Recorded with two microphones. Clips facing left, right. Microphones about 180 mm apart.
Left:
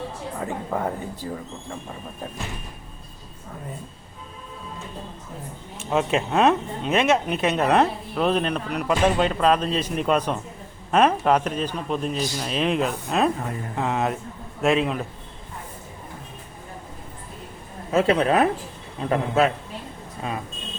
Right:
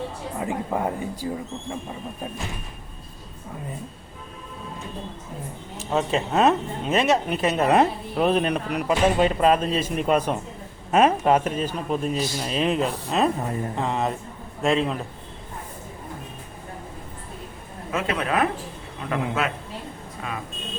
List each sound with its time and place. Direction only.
0.3 s speech: 15° right (ahead or behind)
5.9 s speech: 5° left (ahead or behind)
17.9 s speech: 30° left (ahead or behind)